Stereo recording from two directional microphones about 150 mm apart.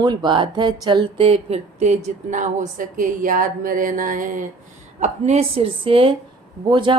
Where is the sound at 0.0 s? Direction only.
30° right (ahead or behind); by 4.4 s 65° right (ahead or behind).